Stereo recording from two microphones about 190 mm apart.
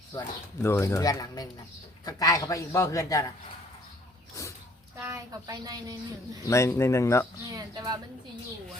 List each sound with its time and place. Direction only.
0.2 s speech: 15° left (ahead or behind)
4.9 s a woman's voice: 15° right (ahead or behind)
6.4 s speech: 15° left (ahead or behind)
7.5 s a woman's voice: 20° right (ahead or behind)